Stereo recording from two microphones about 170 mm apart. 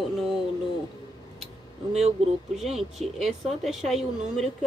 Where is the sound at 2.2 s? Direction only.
40° right (ahead or behind).